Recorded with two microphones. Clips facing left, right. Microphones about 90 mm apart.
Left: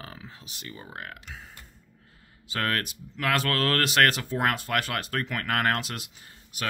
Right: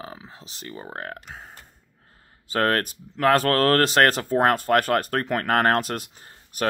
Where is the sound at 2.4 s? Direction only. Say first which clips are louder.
Right 7 dB; 40° right (ahead or behind).